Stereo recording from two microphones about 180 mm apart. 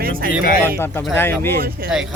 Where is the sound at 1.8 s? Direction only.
55° right (ahead or behind).